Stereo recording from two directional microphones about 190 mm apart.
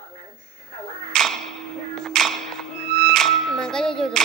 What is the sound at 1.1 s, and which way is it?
Music, centre (ahead or behind).